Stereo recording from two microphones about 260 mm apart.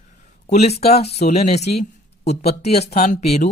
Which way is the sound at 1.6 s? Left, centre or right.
Left.